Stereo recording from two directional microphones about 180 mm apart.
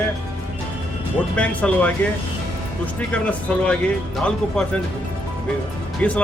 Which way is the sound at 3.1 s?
5° left (ahead or behind).